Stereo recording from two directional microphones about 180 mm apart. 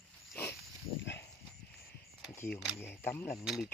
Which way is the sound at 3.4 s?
Centre (ahead or behind).